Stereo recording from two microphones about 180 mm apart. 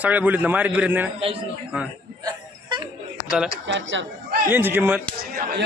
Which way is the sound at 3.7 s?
90° right.